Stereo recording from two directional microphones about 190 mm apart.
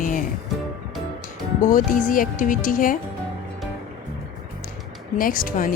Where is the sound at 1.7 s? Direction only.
45° left (ahead or behind).